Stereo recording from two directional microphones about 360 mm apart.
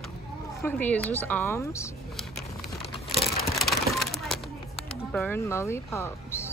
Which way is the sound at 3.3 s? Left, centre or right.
Centre.